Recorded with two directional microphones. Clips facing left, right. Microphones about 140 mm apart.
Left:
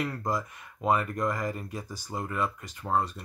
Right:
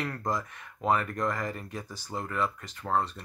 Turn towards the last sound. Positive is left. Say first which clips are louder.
# left 1 dB
turn(degrees=10)  # may be behind; listen again after turning